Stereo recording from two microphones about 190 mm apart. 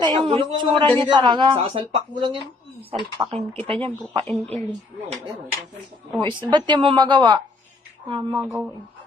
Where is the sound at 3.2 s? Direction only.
20° right (ahead or behind).